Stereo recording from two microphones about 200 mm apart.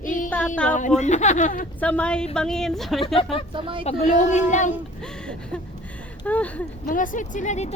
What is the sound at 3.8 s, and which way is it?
Speech, 40° left (ahead or behind).